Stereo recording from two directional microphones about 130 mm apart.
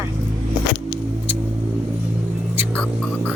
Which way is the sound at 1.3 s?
15° right (ahead or behind).